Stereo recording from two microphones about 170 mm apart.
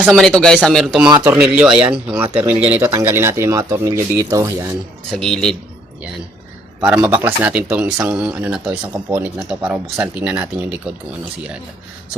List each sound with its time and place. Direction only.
0.0 s speech: centre (ahead or behind); by 4.8 s 20° right (ahead or behind)
5.1 s speech: 5° left (ahead or behind)
6.8 s speech: 5° right (ahead or behind)